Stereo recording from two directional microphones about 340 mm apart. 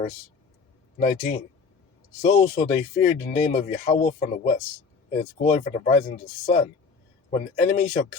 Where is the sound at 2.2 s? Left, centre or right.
Centre.